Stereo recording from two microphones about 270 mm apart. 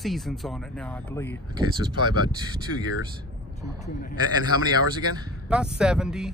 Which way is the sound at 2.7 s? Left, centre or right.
Left.